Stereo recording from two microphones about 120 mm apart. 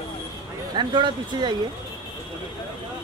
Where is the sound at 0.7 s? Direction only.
40° right (ahead or behind).